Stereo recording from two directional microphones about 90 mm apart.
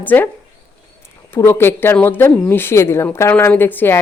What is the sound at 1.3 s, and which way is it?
Speech, 25° left (ahead or behind).